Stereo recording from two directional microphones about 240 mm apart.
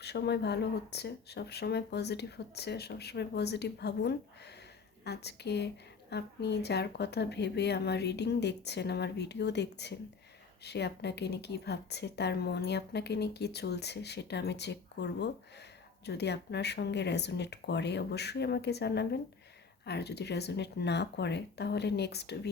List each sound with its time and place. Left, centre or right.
0.0 s a woman's voice: left